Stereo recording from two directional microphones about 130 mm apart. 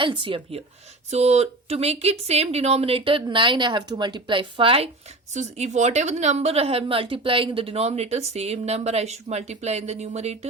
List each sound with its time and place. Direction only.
0.0 s speech: 40° right (ahead or behind)
1.1 s speech: 55° right (ahead or behind)
5.3 s a woman's voice: 65° right (ahead or behind)